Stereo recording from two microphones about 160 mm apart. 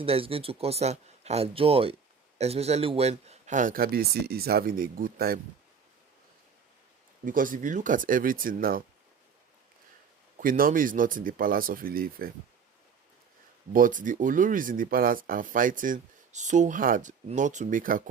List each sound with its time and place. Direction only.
0.0 s speech: 35° right (ahead or behind); by 5.4 s 70° right (ahead or behind)
7.3 s speech: 60° right (ahead or behind)
10.3 s speech: 60° right (ahead or behind)
13.7 s speech: 55° right (ahead or behind)